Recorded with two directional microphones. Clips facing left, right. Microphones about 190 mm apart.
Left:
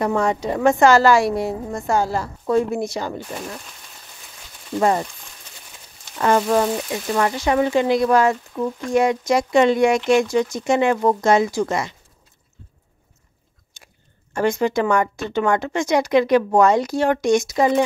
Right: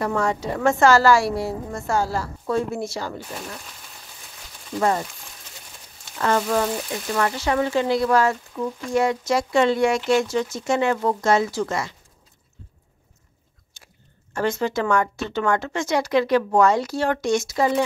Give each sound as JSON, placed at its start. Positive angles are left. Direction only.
{"t": 0.0, "sound": "a woman's voice", "side_deg": 20}
{"t": 4.7, "sound": "a woman's voice", "side_deg": 20}
{"t": 6.1, "sound": "a woman's voice", "side_deg": 15}
{"t": 13.8, "sound": "chewing", "side_deg": 15}
{"t": 14.3, "sound": "speech", "side_deg": 15}